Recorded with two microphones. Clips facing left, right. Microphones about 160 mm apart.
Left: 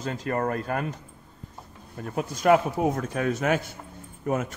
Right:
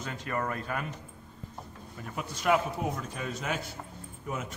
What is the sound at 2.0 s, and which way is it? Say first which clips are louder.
A man's voice: left 8 dB; 45° left (ahead or behind).